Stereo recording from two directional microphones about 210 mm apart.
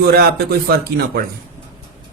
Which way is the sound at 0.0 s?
50° right (ahead or behind).